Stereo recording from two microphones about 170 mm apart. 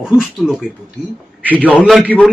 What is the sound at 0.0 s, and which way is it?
Speech, 5° right (ahead or behind).